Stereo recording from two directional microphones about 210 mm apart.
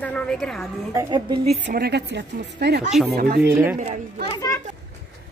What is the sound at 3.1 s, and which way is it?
Speech, 45° right (ahead or behind).